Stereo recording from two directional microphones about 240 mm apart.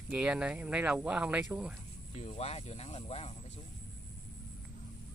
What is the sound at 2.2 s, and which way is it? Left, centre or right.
Speech, left.